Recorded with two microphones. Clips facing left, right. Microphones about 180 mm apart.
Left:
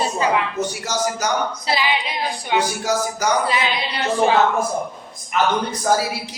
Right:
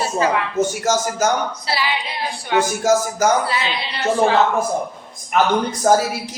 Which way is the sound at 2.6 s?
45° right (ahead or behind).